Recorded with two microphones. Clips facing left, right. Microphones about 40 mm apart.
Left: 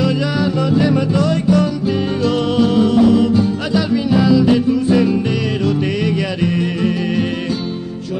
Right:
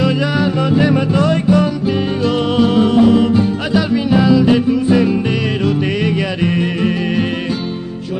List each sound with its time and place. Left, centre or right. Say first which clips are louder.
0.0 s music: right 2 dB; right